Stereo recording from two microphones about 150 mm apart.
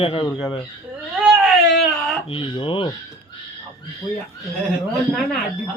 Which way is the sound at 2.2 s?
35° left (ahead or behind).